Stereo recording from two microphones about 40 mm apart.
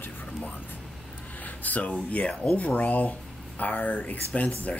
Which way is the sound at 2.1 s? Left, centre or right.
Left.